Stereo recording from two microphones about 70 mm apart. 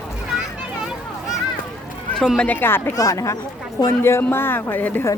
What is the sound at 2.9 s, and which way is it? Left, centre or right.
Speech, left.